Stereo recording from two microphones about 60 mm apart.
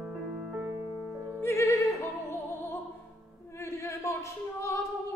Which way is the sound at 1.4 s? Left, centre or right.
Left.